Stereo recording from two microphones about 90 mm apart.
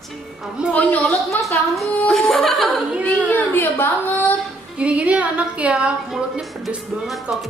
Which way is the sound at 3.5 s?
20° left (ahead or behind).